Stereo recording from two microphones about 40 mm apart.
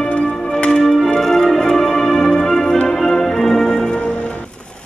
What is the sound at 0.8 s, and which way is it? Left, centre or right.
Music, centre.